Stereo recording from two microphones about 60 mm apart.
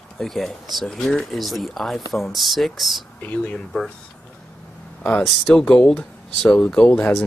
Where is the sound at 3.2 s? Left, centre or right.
Left.